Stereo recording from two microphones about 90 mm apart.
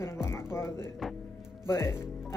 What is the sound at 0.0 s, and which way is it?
Music, 30° left (ahead or behind).